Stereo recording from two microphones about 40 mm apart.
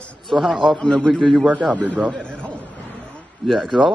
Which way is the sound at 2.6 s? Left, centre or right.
Left.